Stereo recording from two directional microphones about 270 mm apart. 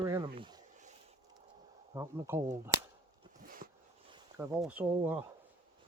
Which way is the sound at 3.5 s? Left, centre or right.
Right.